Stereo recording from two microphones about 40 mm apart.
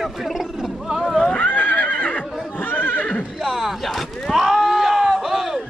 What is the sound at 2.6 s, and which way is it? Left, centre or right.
Neigh, left.